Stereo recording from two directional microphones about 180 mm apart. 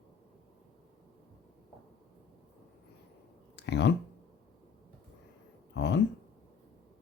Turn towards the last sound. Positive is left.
turn(degrees=75)  # may be behind; listen again after turning